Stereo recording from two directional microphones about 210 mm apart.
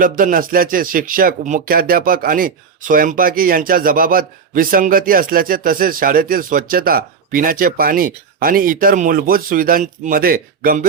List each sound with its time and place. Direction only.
0.0 s speech: 40° right (ahead or behind)